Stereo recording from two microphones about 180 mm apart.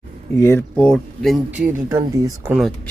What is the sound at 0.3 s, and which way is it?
Speech, 15° left (ahead or behind).